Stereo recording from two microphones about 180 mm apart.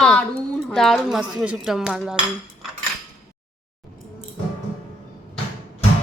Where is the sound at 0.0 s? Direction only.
5° left (ahead or behind).